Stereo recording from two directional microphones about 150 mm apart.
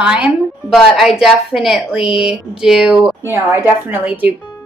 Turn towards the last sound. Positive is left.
turn(degrees=-10)  # may be behind; listen again after turning